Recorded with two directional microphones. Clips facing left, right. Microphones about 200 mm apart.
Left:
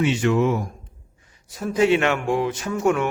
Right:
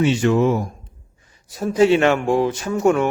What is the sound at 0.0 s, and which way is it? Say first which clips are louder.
A man's voice: right 3 dB; 35° right (ahead or behind).